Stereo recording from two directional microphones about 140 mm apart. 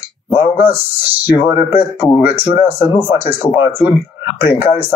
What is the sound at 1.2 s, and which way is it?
Speech, 15° right (ahead or behind).